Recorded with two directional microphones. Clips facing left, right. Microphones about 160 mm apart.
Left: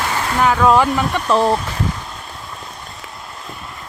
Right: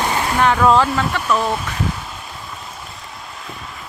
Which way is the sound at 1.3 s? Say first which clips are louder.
Left 5 dB; 25° left (ahead or behind).